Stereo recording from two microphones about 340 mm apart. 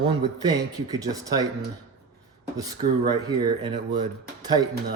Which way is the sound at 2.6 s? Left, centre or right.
Centre.